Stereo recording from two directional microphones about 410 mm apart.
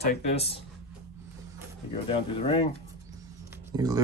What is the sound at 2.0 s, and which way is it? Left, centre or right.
Speech, centre.